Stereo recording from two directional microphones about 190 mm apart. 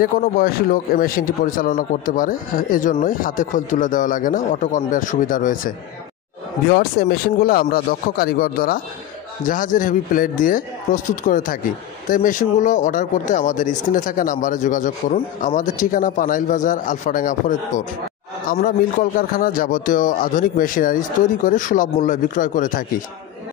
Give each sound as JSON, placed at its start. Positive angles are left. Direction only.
{"t": 0.0, "sound": "speech", "side_deg": 50}